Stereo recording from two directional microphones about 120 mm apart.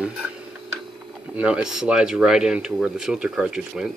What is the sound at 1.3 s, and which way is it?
Speech, 10° right (ahead or behind).